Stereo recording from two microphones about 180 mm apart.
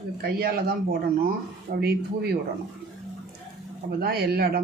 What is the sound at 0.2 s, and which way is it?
Speech, 60° right (ahead or behind).